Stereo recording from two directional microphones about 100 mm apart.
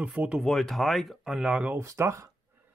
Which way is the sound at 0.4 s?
5° left (ahead or behind).